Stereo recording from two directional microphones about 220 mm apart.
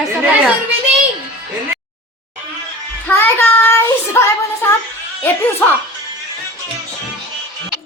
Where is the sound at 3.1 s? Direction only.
10° left (ahead or behind).